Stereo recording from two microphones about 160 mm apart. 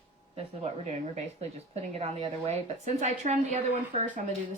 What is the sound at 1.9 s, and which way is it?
A woman's voice, 35° right (ahead or behind).